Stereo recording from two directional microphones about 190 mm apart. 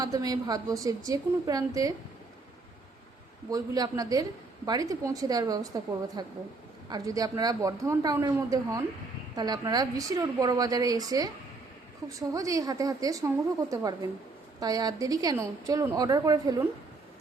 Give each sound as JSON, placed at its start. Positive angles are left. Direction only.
{"t": 0.0, "sound": "a woman's voice", "side_deg": -20}
{"t": 3.5, "sound": "a woman's voice", "side_deg": -20}